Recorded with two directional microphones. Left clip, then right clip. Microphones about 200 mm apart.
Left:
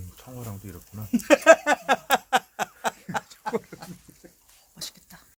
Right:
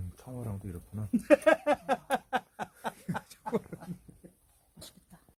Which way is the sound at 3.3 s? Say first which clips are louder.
Left 5 dB; 55° right (ahead or behind).